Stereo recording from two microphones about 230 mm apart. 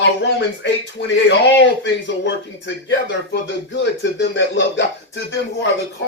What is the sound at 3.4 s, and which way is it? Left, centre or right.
Speech, left.